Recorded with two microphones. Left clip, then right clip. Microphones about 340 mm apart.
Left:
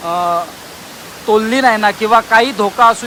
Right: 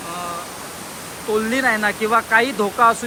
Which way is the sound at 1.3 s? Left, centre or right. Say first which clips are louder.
Left 7 dB; centre.